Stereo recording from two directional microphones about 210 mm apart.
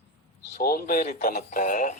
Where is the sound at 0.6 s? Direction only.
45° left (ahead or behind).